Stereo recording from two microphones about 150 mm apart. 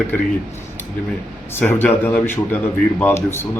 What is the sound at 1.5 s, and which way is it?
A man's voice, 15° left (ahead or behind).